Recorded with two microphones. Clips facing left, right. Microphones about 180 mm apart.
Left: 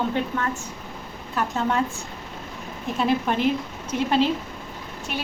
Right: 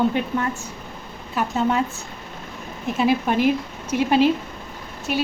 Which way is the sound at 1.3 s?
5° right (ahead or behind).